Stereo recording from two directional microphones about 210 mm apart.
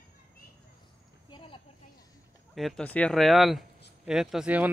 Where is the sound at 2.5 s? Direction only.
Centre (ahead or behind).